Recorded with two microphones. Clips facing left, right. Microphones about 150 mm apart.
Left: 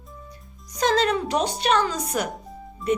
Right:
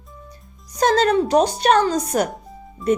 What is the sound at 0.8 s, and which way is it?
Speech, 40° right (ahead or behind).